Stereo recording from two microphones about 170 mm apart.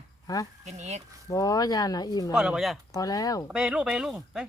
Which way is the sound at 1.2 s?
20° left (ahead or behind).